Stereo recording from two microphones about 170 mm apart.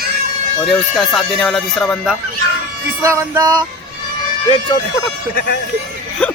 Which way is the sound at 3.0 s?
15° right (ahead or behind).